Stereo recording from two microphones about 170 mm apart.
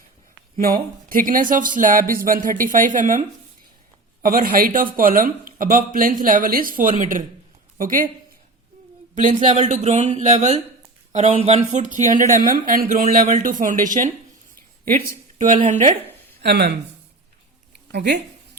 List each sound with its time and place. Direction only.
0.5 s speech: 55° right (ahead or behind)
9.1 s speech: 45° right (ahead or behind)
15.6 s speech: 45° right (ahead or behind)
16.4 s speech: 75° right (ahead or behind)
17.9 s speech: 80° right